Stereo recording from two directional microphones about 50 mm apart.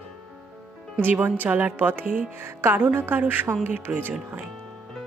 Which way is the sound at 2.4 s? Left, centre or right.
Right.